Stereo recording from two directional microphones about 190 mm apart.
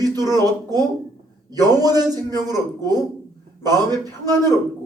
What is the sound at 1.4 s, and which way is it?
A man's voice, 20° right (ahead or behind).